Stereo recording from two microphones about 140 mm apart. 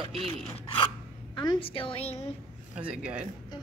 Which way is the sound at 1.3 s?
30° left (ahead or behind).